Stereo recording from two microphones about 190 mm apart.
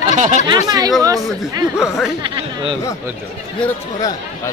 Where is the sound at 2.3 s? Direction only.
25° right (ahead or behind).